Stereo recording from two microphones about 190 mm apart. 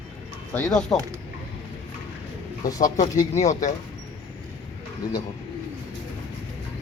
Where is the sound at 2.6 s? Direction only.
20° left (ahead or behind).